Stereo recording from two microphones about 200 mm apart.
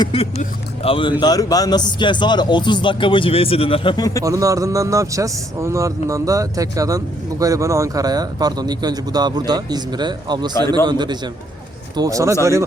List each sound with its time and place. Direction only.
0.0 s speech: 30° left (ahead or behind)
4.2 s a man's voice: 15° right (ahead or behind)